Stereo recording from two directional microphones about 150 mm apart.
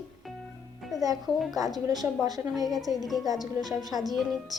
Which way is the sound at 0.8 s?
Centre (ahead or behind).